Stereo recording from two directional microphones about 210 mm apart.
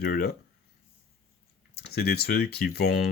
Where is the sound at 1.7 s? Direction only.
50° left (ahead or behind).